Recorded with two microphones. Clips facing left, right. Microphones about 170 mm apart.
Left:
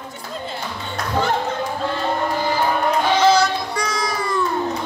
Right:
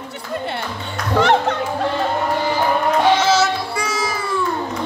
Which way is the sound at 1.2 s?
75° right (ahead or behind).